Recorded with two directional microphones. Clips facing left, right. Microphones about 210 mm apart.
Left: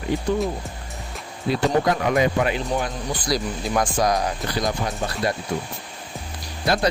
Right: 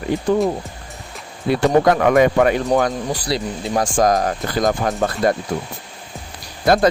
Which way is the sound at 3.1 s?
35° right (ahead or behind).